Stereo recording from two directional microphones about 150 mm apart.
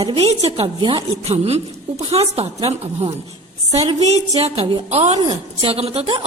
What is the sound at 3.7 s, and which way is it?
A woman's voice, 45° right (ahead or behind).